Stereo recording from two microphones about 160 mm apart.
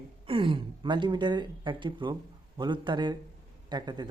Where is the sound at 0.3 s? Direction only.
35° right (ahead or behind).